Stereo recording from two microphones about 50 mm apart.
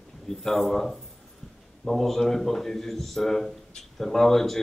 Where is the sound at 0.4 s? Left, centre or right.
Centre.